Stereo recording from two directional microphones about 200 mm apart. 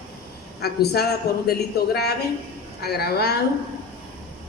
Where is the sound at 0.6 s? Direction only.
55° left (ahead or behind).